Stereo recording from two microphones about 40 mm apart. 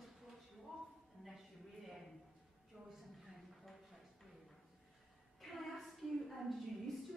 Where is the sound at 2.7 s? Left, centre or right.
Centre.